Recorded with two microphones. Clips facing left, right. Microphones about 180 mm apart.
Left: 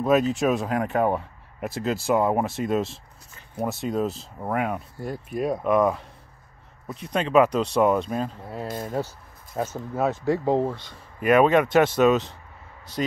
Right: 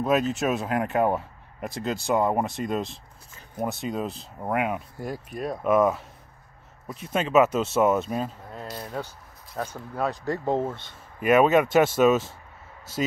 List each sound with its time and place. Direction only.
0.0 s speech: centre (ahead or behind)
5.3 s speech: 5° left (ahead or behind)
8.6 s speech: 50° left (ahead or behind)
9.9 s speech: 5° left (ahead or behind)